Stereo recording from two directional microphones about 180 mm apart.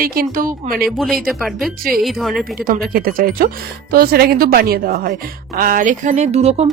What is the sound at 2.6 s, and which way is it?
Speech, 55° right (ahead or behind).